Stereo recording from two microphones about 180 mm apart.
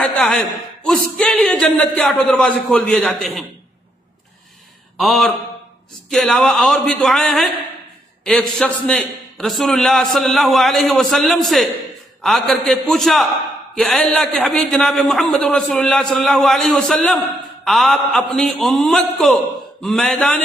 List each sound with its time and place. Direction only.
0.0 s a sound: 10° left (ahead or behind)
0.8 s a man's voice: 5° left (ahead or behind)
4.9 s a man's voice: centre (ahead or behind)